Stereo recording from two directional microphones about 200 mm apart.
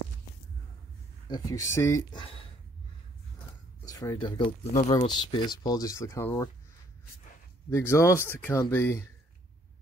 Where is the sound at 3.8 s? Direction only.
15° left (ahead or behind); by 4.9 s 35° left (ahead or behind).